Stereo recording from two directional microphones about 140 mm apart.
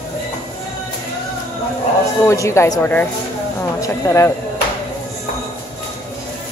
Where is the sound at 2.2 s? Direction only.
20° left (ahead or behind).